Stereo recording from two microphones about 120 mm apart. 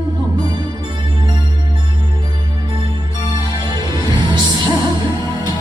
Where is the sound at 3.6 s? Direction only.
40° right (ahead or behind).